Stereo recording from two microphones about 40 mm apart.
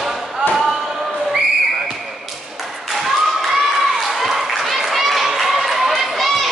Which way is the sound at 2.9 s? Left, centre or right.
Centre.